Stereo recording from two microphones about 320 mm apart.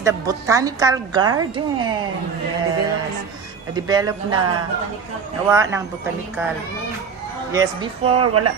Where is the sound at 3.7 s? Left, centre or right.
Centre.